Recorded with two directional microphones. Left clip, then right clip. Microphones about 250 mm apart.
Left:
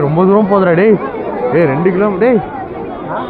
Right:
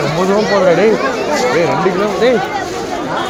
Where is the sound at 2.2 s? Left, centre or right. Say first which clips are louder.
Even; left.